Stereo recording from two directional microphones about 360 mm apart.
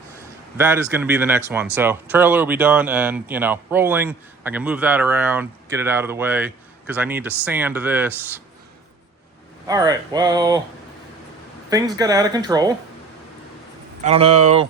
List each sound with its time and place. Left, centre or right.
0.5 s speech: centre
9.6 s speech: centre
11.7 s speech: centre
14.0 s speech: centre